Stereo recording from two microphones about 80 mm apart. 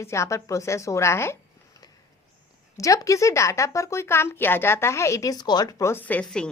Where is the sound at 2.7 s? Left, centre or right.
Left.